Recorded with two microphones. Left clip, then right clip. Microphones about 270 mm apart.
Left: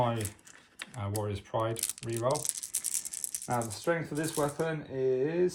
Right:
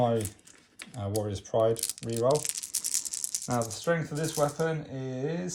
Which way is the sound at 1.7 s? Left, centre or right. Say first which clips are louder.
Right 4 dB; centre.